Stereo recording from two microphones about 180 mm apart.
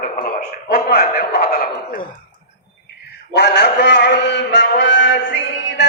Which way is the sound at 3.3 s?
70° left (ahead or behind).